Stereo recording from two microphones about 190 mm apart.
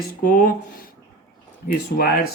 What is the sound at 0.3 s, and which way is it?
Speech, 45° left (ahead or behind).